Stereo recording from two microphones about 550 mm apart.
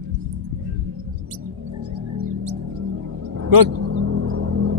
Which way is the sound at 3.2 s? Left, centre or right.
Right.